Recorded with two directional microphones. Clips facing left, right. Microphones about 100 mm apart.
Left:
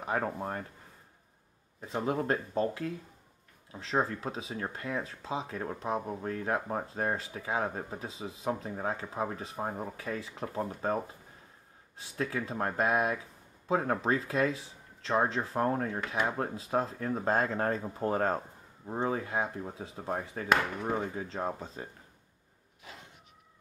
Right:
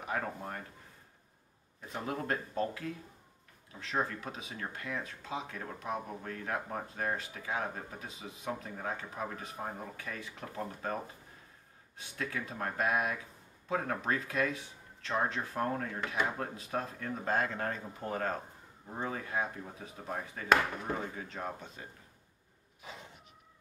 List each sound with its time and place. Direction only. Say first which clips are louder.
0.0 s speech: left 4 dB; 30° left (ahead or behind)
1.8 s speech: left 6 dB; 30° left (ahead or behind)
12.0 s speech: left 5 dB; 30° left (ahead or behind)